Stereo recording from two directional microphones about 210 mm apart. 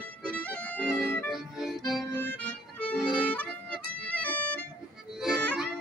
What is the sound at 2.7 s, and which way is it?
Music, 5° left (ahead or behind).